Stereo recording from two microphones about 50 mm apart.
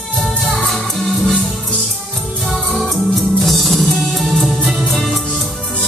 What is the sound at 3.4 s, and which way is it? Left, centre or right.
Music, centre.